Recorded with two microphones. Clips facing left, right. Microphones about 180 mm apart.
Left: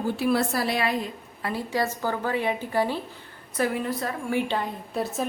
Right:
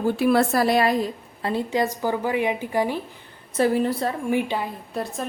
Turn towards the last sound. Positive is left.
turn(degrees=0)  # may be behind; listen again after turning